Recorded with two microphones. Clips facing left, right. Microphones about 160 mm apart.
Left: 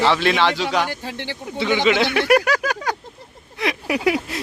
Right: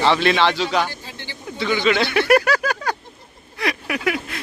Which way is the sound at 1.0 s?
65° left (ahead or behind).